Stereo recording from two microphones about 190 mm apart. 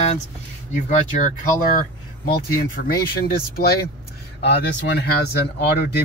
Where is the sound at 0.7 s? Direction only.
40° left (ahead or behind).